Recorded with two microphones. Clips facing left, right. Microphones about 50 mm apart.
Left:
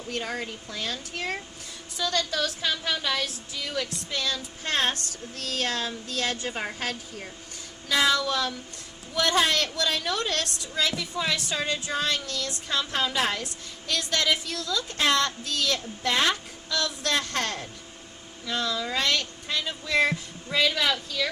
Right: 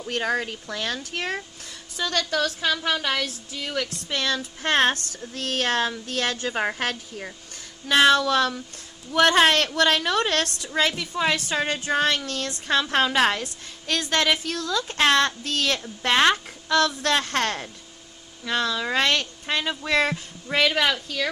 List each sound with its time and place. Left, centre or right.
0.1 s speech: right
2.0 s a woman's voice: right